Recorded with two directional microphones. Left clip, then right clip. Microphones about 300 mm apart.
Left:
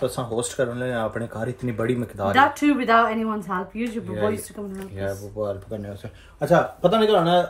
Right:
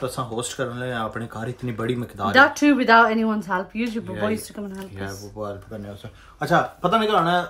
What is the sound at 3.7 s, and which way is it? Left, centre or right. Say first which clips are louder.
Speech: right 1 dB; centre.